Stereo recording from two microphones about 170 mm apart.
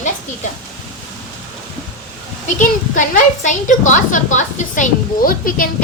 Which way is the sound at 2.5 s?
50° left (ahead or behind).